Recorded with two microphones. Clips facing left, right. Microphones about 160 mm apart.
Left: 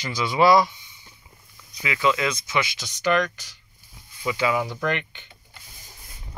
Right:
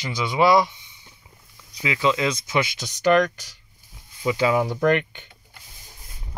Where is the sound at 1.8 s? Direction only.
25° right (ahead or behind).